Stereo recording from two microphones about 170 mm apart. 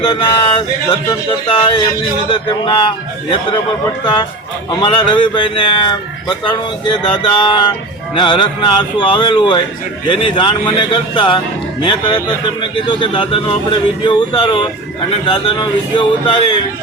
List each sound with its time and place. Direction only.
0.0 s speech: 30° left (ahead or behind)